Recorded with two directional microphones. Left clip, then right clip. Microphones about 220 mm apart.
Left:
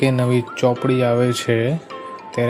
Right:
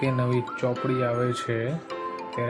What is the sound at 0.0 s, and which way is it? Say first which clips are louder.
Speech: left 7 dB; 30° left (ahead or behind).